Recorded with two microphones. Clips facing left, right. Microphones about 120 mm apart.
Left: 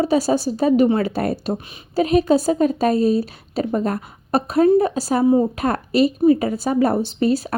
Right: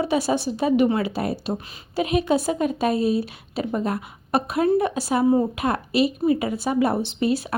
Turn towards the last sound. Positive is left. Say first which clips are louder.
# left 4 dB
turn(degrees=40)  # may be behind; listen again after turning